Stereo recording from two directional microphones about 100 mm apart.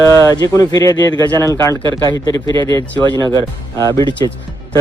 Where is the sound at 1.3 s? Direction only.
30° left (ahead or behind).